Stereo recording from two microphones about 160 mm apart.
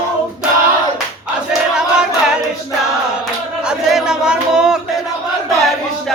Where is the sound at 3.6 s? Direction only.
5° right (ahead or behind).